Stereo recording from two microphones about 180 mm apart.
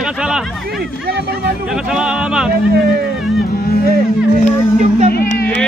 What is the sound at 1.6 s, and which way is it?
Speech, 5° right (ahead or behind).